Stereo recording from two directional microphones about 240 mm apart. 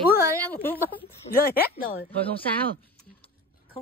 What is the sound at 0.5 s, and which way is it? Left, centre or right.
Speech, centre.